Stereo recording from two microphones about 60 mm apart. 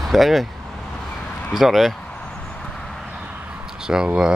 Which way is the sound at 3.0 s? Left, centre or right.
Centre.